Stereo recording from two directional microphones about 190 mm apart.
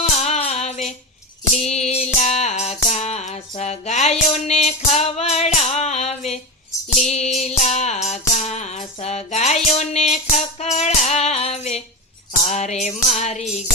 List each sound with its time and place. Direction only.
0.0 s music: 35° left (ahead or behind)
5.5 s a sound: 35° left (ahead or behind)
7.0 s music: 35° left (ahead or behind)